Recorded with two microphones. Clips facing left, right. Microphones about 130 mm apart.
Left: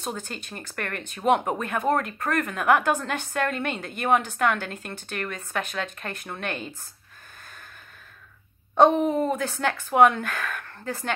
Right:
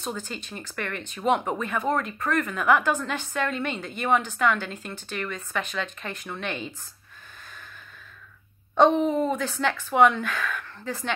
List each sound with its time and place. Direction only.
0.1 s a woman's voice: 55° left (ahead or behind)
8.9 s a woman's voice: 5° left (ahead or behind)
9.6 s a woman's voice: 45° left (ahead or behind)